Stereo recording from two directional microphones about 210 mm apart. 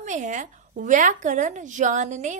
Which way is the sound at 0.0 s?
35° right (ahead or behind).